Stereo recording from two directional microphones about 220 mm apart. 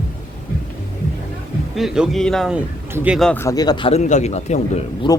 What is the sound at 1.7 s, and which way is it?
Speech, centre (ahead or behind).